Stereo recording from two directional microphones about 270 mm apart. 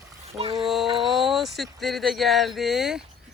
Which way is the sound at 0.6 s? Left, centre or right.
Centre.